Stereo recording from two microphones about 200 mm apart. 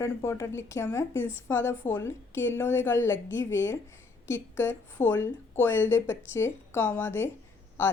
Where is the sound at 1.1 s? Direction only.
75° left (ahead or behind).